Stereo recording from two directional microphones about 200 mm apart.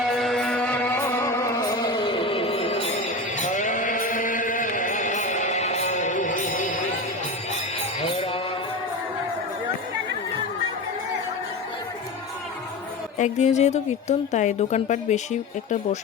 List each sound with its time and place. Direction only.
0.0 s music: centre (ahead or behind); by 6.7 s 40° left (ahead or behind)
8.0 s mantra: 30° left (ahead or behind)
13.1 s a woman's voice: 35° left (ahead or behind)